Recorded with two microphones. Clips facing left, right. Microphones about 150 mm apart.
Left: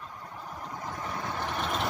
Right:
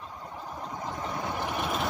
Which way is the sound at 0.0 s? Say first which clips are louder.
Right 2 dB; 20° right (ahead or behind).